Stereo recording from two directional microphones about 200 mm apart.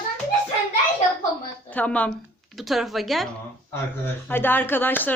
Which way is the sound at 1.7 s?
5° left (ahead or behind).